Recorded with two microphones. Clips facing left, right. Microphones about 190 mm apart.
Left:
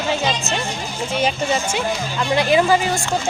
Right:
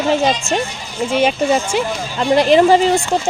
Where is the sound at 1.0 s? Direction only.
55° right (ahead or behind).